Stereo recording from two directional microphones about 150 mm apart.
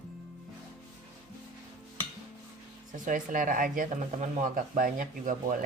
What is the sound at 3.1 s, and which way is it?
Speech, 65° right (ahead or behind).